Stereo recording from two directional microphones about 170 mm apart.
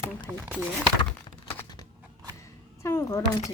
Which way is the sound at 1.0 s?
30° left (ahead or behind).